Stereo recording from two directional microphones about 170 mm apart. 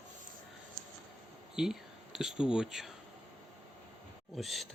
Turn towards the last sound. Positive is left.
turn(degrees=0)  # may be behind; listen again after turning